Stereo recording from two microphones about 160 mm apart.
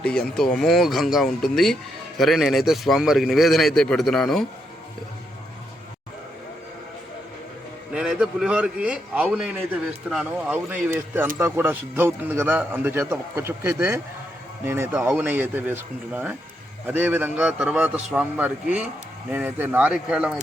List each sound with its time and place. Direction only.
0.0 s a man's voice: 5° left (ahead or behind)
7.9 s a man's voice: 5° right (ahead or behind)